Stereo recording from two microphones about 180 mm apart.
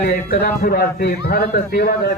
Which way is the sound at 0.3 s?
55° left (ahead or behind).